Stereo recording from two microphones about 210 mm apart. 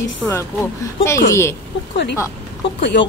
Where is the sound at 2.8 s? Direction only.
60° left (ahead or behind).